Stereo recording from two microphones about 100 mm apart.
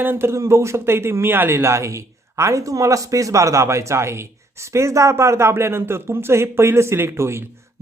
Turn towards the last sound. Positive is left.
turn(degrees=-25)  # may be behind; listen again after turning